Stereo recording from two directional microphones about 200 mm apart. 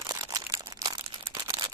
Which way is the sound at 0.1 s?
15° right (ahead or behind).